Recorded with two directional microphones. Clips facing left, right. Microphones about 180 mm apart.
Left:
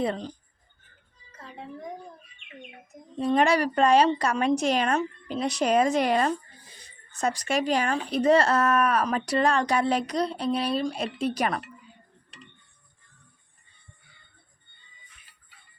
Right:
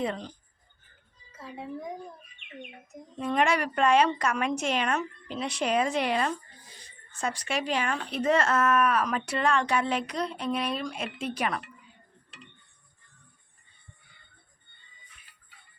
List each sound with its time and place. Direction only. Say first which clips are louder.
0.0 s speech: left 3 dB; 35° left (ahead or behind)
3.2 s speech: left 4 dB; 35° left (ahead or behind)